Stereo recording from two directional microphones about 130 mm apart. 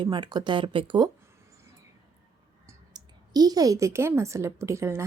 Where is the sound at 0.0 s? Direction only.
35° right (ahead or behind).